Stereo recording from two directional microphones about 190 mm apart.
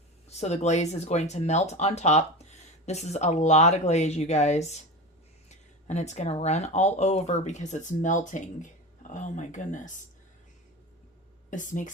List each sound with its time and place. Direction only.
0.3 s speech: 35° left (ahead or behind)
11.5 s speech: 40° left (ahead or behind)